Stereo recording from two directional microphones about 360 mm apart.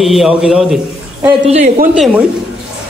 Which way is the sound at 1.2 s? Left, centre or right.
Centre.